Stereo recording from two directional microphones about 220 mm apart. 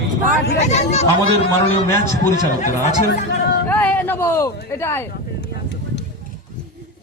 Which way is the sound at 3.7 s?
5° left (ahead or behind).